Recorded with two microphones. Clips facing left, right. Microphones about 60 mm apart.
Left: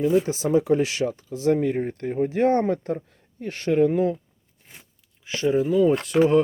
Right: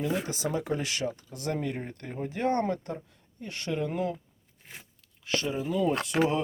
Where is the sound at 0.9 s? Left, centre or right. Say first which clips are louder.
Left 6 dB; left.